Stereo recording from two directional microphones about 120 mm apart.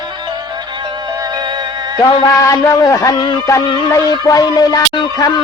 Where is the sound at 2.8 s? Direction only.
30° left (ahead or behind).